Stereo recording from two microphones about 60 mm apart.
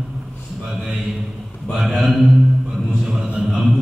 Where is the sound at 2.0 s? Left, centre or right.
Centre.